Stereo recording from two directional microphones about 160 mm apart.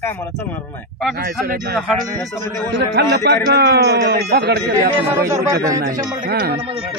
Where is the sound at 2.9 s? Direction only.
85° right.